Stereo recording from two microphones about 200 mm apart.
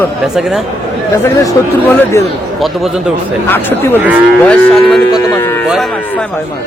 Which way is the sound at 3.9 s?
10° right (ahead or behind).